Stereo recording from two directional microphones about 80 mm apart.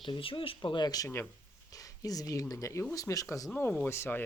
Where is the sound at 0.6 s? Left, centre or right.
Left.